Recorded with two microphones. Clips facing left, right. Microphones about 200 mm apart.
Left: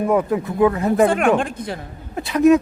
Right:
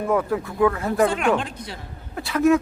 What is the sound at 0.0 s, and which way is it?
Speech, 20° left (ahead or behind).